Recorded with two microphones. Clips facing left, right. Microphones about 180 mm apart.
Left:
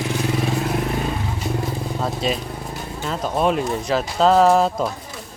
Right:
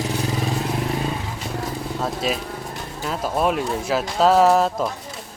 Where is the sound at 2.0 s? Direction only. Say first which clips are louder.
Left 1 dB; centre (ahead or behind).